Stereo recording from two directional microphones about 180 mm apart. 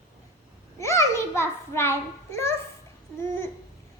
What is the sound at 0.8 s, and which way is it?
A child's voice, 15° left (ahead or behind).